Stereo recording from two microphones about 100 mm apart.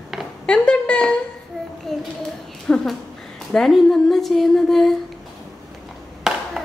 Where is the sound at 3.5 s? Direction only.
5° left (ahead or behind).